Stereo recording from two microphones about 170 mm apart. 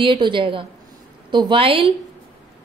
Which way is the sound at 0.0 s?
30° right (ahead or behind).